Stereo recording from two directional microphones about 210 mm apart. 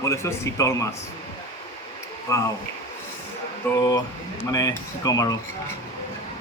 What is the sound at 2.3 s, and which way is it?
Speech, 15° left (ahead or behind).